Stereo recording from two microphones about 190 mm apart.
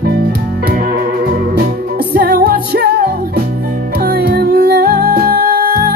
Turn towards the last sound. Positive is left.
turn(degrees=-50)  # may be behind; listen again after turning